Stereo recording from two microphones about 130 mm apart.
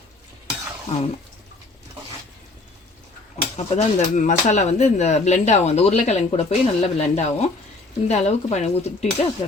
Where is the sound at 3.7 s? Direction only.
70° left (ahead or behind); by 8.7 s 55° left (ahead or behind).